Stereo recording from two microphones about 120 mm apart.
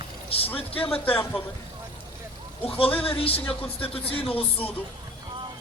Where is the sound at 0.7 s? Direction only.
50° left (ahead or behind).